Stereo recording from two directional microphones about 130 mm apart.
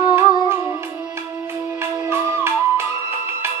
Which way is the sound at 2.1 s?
20° right (ahead or behind).